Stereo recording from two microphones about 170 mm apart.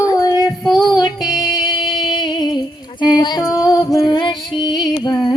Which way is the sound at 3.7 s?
20° left (ahead or behind).